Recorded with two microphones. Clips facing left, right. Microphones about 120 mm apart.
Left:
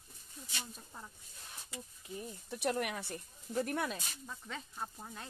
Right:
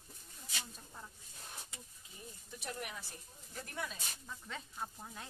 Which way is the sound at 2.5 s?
70° left (ahead or behind).